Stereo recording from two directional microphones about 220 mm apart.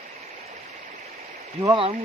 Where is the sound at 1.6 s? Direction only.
25° right (ahead or behind).